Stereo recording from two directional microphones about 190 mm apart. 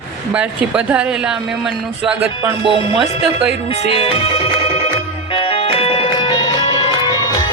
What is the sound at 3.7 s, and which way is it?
Speech, 30° left (ahead or behind).